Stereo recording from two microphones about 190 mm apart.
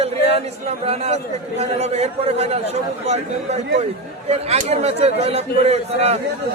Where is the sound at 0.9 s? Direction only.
35° right (ahead or behind).